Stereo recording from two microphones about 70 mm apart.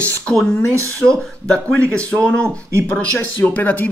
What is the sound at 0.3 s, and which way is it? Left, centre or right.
Speech, centre.